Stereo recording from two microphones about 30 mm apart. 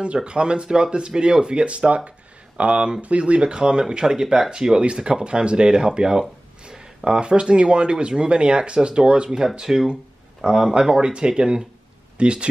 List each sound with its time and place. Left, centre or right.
0.0 s speech: right
2.0 s a sound: right
3.0 s speech: right
5.9 s speech: right
6.6 s a sound: right
7.2 s speech: right